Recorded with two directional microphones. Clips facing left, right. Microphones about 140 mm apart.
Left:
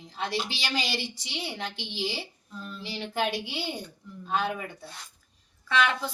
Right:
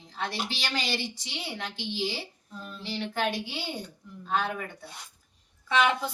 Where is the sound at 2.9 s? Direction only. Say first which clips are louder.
Even; 10° left (ahead or behind).